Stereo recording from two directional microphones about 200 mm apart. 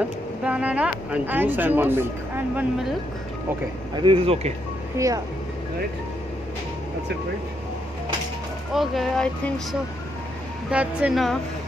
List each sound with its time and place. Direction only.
0.4 s speech: 5° right (ahead or behind)
3.9 s speech: 25° right (ahead or behind)
4.9 s speech: 15° right (ahead or behind)
8.7 s speech: centre (ahead or behind)